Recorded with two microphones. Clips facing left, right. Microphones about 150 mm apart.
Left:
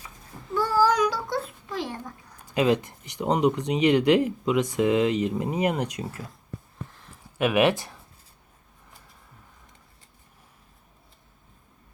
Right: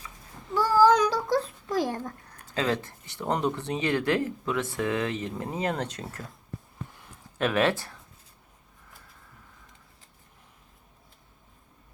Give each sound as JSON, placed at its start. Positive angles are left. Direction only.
{"t": 0.9, "sound": "a sound", "side_deg": -30}
{"t": 2.5, "sound": "speech", "side_deg": 15}
{"t": 7.3, "sound": "speech", "side_deg": 10}